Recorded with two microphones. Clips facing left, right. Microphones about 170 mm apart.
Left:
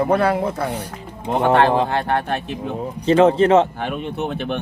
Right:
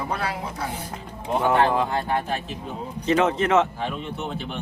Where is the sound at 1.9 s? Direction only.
70° left (ahead or behind).